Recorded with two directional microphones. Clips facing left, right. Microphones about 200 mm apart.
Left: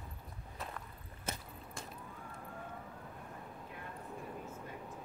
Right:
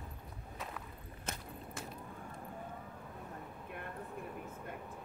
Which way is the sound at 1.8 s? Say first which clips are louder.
Right 2 dB; 5° right (ahead or behind).